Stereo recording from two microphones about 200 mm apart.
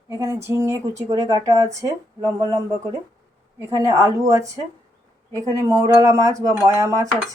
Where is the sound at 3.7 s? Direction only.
15° right (ahead or behind).